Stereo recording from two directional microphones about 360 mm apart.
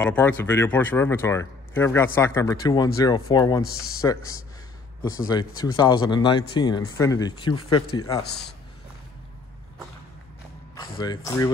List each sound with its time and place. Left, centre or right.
0.0 s speech: centre
5.3 s speech: centre
7.8 s a man's voice: left
10.7 s speech: centre